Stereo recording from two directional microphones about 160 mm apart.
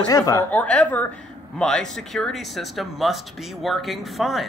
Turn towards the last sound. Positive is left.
turn(degrees=0)  # may be behind; listen again after turning